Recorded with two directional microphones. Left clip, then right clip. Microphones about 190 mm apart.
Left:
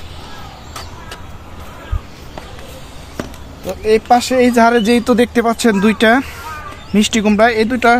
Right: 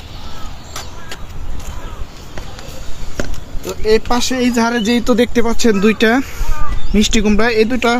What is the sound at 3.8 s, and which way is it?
Speech, 20° left (ahead or behind).